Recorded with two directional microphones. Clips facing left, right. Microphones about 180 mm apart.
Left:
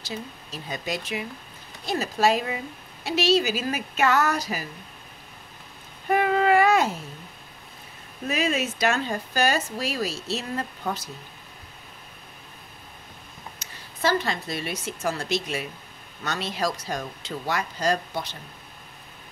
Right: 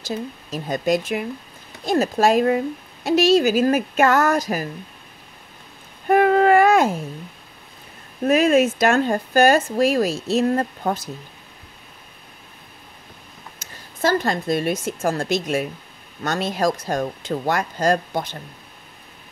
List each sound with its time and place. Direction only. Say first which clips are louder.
0.0 s speech: right 7 dB; 45° right (ahead or behind)
6.0 s a sound: right 6 dB; 50° right (ahead or behind)
8.3 s speech: right 10 dB; 50° right (ahead or behind)
13.6 s a woman's voice: right 5 dB; 45° right (ahead or behind)